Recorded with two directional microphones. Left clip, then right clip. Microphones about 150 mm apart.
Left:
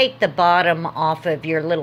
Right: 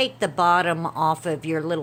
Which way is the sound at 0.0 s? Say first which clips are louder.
Left 5 dB; 35° right (ahead or behind).